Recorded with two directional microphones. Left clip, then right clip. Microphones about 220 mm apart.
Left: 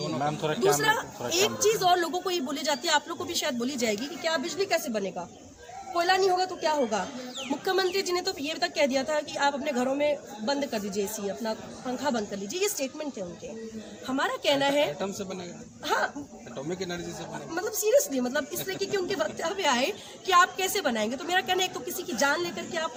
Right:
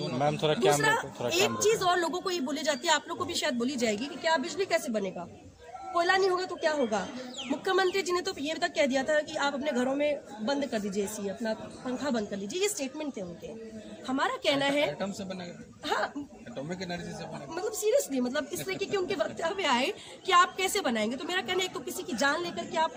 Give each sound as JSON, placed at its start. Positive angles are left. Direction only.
{"t": 0.2, "sound": "speech", "side_deg": -50}
{"t": 0.8, "sound": "a woman's voice", "side_deg": -10}
{"t": 12.0, "sound": "a woman's voice", "side_deg": -5}
{"t": 14.1, "sound": "a woman's voice", "side_deg": -10}
{"t": 14.9, "sound": "speech", "side_deg": 5}
{"t": 16.6, "sound": "a man's voice", "side_deg": 5}
{"t": 17.5, "sound": "a woman's voice", "side_deg": -10}